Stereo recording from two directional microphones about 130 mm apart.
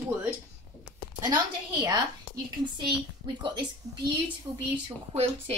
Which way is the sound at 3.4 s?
35° right (ahead or behind).